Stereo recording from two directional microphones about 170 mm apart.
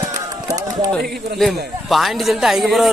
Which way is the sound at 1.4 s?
Centre (ahead or behind).